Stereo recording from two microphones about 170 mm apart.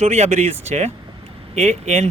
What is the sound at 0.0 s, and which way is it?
Speech, 40° right (ahead or behind).